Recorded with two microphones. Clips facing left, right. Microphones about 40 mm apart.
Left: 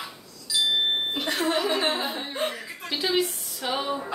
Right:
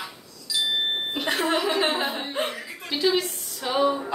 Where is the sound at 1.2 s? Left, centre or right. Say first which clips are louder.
Right 2 dB; right.